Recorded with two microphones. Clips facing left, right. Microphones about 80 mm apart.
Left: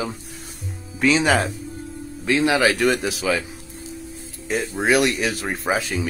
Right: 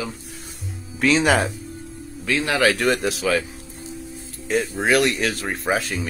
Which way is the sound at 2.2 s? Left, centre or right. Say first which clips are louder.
Left 2 dB; centre.